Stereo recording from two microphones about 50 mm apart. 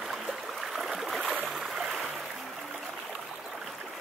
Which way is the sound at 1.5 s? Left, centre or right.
Centre.